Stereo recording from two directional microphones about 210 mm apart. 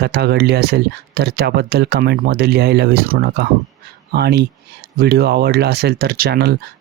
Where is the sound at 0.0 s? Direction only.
50° right (ahead or behind).